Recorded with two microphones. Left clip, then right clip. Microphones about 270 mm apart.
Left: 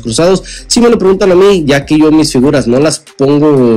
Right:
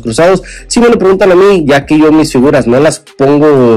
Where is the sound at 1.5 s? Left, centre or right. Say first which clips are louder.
Right 2 dB; centre.